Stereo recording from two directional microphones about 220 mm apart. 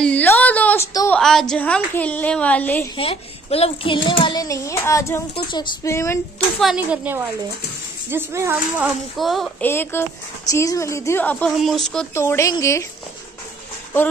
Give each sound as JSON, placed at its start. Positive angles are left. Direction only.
{"t": 0.0, "sound": "a woman's voice", "side_deg": 5}
{"t": 3.0, "sound": "a child's voice", "side_deg": 25}
{"t": 6.6, "sound": "speech", "side_deg": -5}
{"t": 12.1, "sound": "speech", "side_deg": 15}